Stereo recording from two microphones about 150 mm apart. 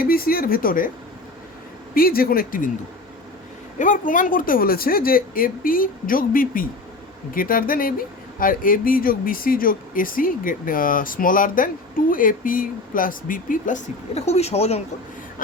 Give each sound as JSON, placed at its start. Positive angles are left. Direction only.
{"t": 0.0, "sound": "speech", "side_deg": 75}
{"t": 2.0, "sound": "speech", "side_deg": 80}
{"t": 3.8, "sound": "speech", "side_deg": 60}